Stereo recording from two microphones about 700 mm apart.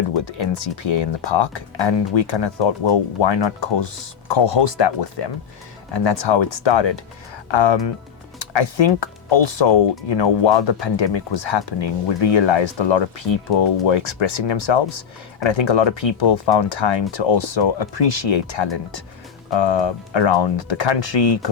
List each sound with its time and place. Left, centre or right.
0.1 s speech: left